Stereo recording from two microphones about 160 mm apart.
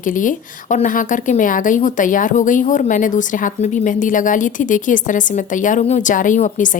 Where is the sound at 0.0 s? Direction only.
55° left (ahead or behind).